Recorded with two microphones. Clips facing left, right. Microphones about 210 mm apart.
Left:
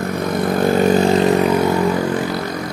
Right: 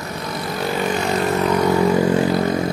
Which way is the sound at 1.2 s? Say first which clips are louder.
Left 4 dB; 15° left (ahead or behind).